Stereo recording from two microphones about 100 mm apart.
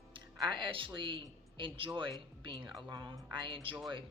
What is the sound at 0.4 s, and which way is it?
A woman's voice, 50° right (ahead or behind).